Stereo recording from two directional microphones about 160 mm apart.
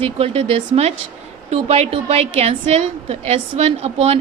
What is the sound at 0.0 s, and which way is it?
A woman's voice, 40° right (ahead or behind).